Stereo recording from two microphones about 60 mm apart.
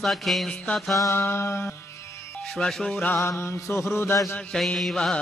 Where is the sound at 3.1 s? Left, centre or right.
Left.